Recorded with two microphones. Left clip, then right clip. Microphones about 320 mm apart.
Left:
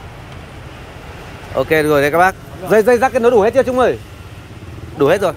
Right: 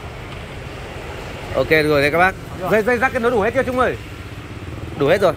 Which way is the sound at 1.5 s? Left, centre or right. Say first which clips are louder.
Left 2 dB; centre.